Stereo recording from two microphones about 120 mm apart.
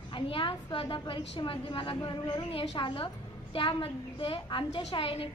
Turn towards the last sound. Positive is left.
turn(degrees=50)  # may be behind; listen again after turning